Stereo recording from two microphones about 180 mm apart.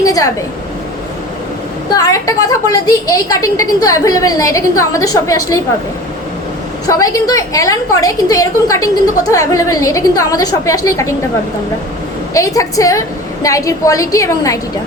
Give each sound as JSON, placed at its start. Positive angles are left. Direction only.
{"t": 0.0, "sound": "speech", "side_deg": 20}
{"t": 1.9, "sound": "a woman's voice", "side_deg": 20}
{"t": 6.8, "sound": "a woman's voice", "side_deg": 20}
{"t": 12.3, "sound": "a woman's voice", "side_deg": 20}